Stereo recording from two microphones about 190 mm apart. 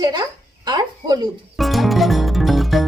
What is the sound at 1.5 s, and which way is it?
Music, centre (ahead or behind).